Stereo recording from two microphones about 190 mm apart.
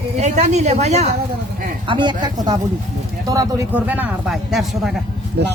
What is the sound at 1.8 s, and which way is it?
Speech, 25° right (ahead or behind).